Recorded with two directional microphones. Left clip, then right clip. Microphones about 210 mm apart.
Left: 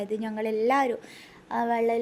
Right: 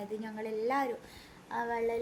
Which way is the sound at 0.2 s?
40° left (ahead or behind).